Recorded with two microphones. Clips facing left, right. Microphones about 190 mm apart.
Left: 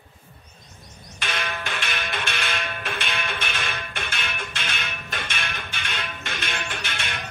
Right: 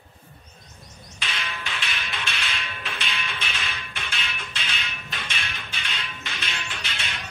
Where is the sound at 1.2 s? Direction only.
55° left (ahead or behind).